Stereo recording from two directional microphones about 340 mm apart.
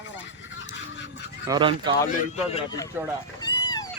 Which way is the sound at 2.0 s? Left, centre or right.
Left.